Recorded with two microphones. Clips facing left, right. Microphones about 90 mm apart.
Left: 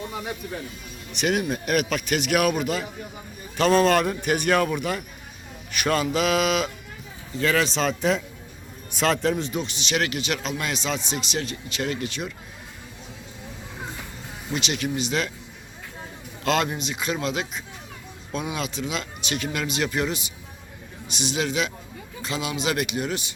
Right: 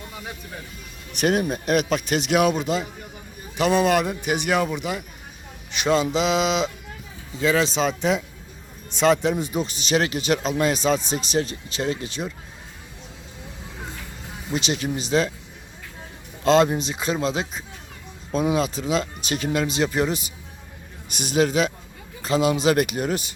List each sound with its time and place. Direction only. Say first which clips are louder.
1.1 s speech: right 3 dB; 40° right (ahead or behind)
3.6 s speech: left 1 dB; 15° right (ahead or behind)
5.7 s mantra: right 2 dB; 20° right (ahead or behind)
7.7 s speech: right 1 dB; centre (ahead or behind)
9.6 s speech: right 4 dB; 40° right (ahead or behind)
14.5 s speech: right 2 dB; 35° right (ahead or behind)
16.4 s speech: right 6 dB; 30° right (ahead or behind)